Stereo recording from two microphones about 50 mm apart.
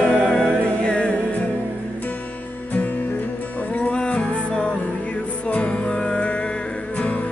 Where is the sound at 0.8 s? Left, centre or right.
Left.